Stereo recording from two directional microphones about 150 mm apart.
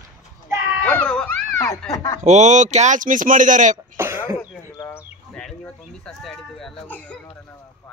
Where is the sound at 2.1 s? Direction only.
50° right (ahead or behind).